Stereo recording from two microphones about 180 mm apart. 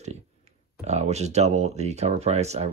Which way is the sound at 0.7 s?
40° right (ahead or behind).